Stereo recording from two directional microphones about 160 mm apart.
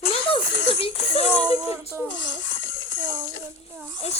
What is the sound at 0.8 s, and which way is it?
Music, 40° left (ahead or behind).